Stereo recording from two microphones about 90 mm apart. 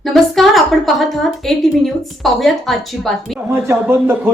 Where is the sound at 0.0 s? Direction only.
Centre (ahead or behind).